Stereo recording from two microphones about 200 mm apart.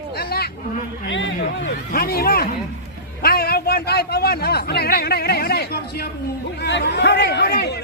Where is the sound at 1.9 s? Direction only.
50° left (ahead or behind).